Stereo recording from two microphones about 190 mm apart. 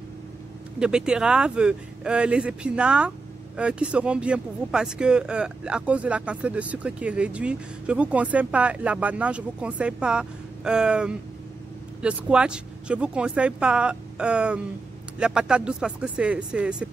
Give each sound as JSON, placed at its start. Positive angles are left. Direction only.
{"t": 0.7, "sound": "speech", "side_deg": -5}